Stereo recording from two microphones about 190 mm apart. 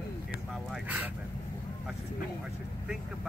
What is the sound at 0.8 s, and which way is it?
Speech, 10° right (ahead or behind).